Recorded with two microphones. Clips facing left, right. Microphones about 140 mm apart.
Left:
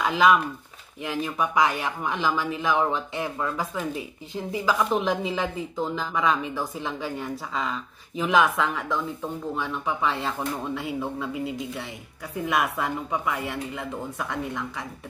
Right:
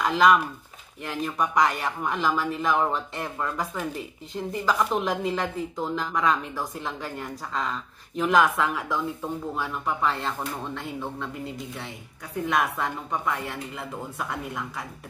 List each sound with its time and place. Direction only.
0.0 s speech: 5° left (ahead or behind)